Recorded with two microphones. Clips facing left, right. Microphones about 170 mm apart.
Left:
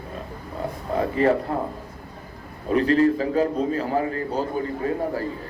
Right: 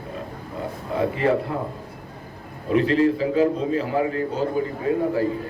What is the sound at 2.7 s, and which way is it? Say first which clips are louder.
A man's voice: even; 40° left (ahead or behind).